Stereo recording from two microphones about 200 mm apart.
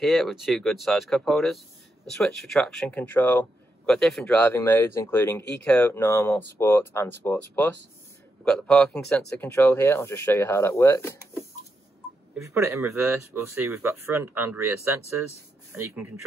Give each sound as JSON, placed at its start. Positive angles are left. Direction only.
{"t": 0.0, "sound": "speech", "side_deg": 0}
{"t": 12.4, "sound": "speech", "side_deg": -15}
{"t": 15.7, "sound": "speech", "side_deg": -10}